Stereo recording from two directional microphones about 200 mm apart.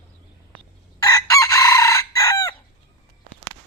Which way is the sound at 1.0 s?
15° left (ahead or behind).